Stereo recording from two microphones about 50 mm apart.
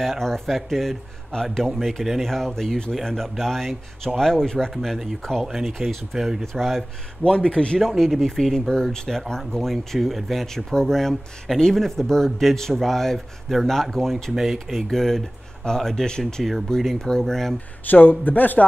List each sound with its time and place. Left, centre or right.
0.0 s speech: centre
5.4 s speech: centre
7.2 s a man's voice: centre
8.0 s speech: centre
17.8 s speech: left